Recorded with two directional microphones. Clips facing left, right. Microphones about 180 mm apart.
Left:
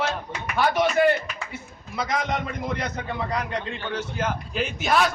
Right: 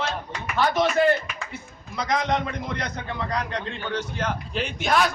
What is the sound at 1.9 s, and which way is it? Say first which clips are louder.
A man's voice: right 2 dB; 5° left (ahead or behind).